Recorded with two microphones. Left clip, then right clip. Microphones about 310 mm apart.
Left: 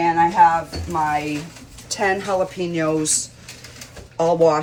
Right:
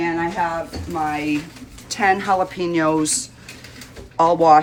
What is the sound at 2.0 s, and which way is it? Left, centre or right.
Speech, centre.